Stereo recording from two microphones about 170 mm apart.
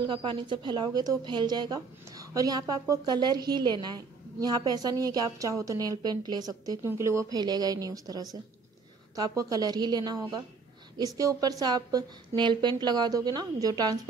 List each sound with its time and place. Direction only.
0.0 s a woman's voice: 30° right (ahead or behind)